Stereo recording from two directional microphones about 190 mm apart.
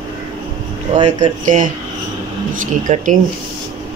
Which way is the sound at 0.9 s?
40° right (ahead or behind).